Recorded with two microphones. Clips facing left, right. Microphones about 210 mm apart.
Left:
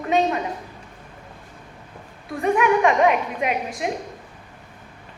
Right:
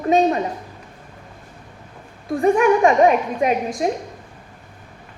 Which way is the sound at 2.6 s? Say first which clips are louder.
Right 2 dB; 40° right (ahead or behind).